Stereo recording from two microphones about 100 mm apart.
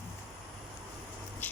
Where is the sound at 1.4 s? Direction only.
15° left (ahead or behind).